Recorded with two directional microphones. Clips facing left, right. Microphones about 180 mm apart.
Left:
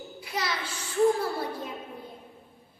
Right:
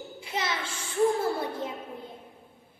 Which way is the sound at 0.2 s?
25° right (ahead or behind).